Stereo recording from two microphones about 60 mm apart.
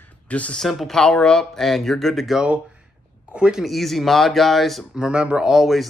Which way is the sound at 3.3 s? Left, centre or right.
Centre.